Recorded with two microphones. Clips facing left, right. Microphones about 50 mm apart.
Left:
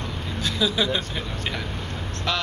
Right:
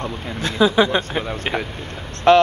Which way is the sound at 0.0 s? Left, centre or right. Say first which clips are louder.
Right 4 dB; right.